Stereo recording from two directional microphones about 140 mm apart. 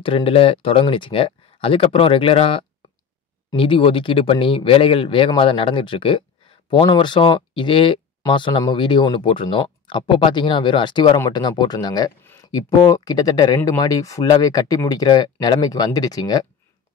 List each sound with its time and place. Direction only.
0.0 s speech: 40° left (ahead or behind)